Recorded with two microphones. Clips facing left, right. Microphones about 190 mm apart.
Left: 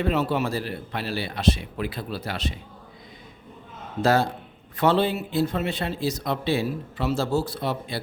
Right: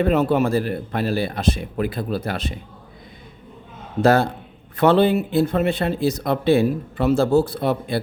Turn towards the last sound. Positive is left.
turn(degrees=-55)  # may be behind; listen again after turning